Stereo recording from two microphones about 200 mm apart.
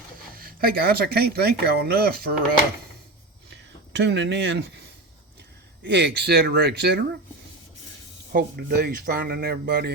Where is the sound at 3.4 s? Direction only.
60° right (ahead or behind).